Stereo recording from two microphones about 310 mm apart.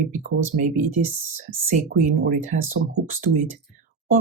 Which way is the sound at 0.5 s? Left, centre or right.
Right.